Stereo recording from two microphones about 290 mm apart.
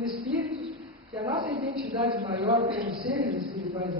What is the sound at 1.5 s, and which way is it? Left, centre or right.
Speech, right.